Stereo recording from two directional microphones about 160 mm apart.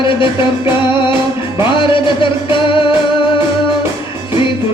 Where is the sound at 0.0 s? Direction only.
30° left (ahead or behind).